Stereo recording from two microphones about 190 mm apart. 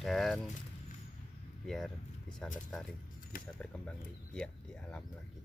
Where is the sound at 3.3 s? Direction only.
50° left (ahead or behind).